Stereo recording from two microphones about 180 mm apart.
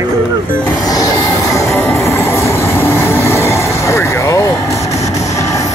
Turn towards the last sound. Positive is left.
turn(degrees=15)  # may be behind; listen again after turning